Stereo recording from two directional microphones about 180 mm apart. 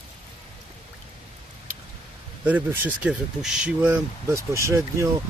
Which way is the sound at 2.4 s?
10° right (ahead or behind).